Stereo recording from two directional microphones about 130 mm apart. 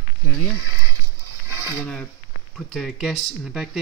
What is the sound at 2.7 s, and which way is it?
Speech, centre (ahead or behind).